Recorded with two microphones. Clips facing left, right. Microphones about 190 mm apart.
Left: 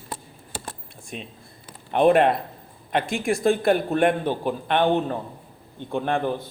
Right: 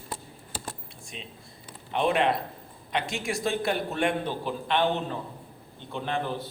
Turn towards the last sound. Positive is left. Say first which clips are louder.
# left 7 dB
turn(degrees=50)  # may be behind; listen again after turning